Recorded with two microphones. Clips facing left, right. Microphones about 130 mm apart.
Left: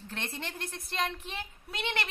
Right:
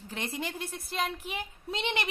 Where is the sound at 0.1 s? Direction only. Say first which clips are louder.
Right 4 dB; 10° right (ahead or behind).